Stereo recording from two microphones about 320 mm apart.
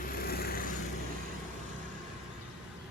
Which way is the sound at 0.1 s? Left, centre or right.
Left.